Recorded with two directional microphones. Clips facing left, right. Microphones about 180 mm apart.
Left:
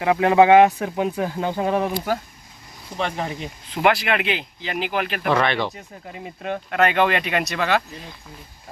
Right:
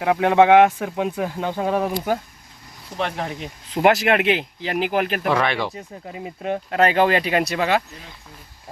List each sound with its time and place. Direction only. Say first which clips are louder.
0.0 s speech: even; centre (ahead or behind)
2.9 s speech: even; centre (ahead or behind)
3.8 s speech: right 3 dB; 45° right (ahead or behind)
5.3 s speech: left 3 dB; 5° right (ahead or behind)
5.7 s speech: right 3 dB; 20° right (ahead or behind)